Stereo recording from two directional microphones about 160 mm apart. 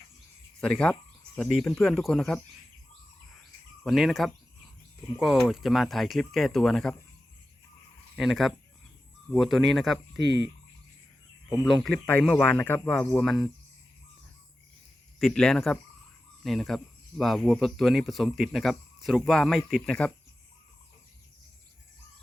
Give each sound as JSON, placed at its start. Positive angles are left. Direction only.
{"t": 0.6, "sound": "speech", "side_deg": 5}
{"t": 3.8, "sound": "speech", "side_deg": 0}
{"t": 8.1, "sound": "speech", "side_deg": 0}
{"t": 10.2, "sound": "fowl", "side_deg": -90}
{"t": 11.6, "sound": "speech", "side_deg": 5}
{"t": 15.2, "sound": "speech", "side_deg": 5}